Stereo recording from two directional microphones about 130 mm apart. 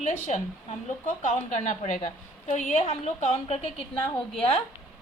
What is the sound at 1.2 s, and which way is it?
A woman's voice, 70° left (ahead or behind).